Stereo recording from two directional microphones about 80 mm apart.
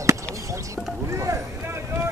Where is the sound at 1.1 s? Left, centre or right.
Right.